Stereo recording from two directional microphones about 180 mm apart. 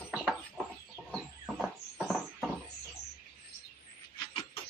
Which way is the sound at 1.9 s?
Centre (ahead or behind).